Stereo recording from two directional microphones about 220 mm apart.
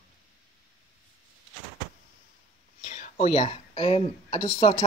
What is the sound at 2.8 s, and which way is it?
Speech, 30° left (ahead or behind).